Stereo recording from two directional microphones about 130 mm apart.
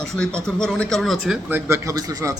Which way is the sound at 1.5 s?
15° right (ahead or behind).